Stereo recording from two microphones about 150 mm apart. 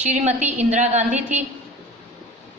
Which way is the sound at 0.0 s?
50° right (ahead or behind).